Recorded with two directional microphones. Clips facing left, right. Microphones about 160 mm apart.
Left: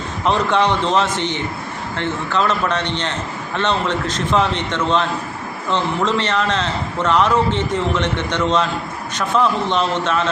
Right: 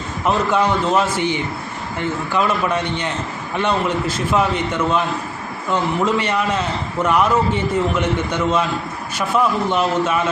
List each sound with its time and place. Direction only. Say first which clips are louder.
0.3 s a man's voice: left 1 dB; 5° right (ahead or behind)